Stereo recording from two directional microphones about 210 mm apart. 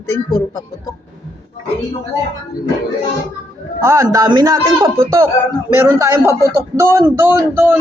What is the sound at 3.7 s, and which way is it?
A man's voice, 15° right (ahead or behind).